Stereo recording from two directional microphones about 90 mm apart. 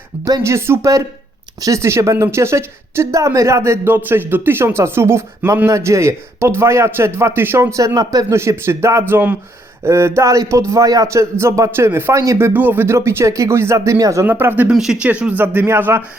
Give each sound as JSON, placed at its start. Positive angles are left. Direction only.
{"t": 0.4, "sound": "speech", "side_deg": -30}
{"t": 7.8, "sound": "speech", "side_deg": -40}
{"t": 8.4, "sound": "speech", "side_deg": -30}
{"t": 12.2, "sound": "speech", "side_deg": -35}
{"t": 12.5, "sound": "speech", "side_deg": -20}
{"t": 14.3, "sound": "speech", "side_deg": -20}
{"t": 14.7, "sound": "speech", "side_deg": -5}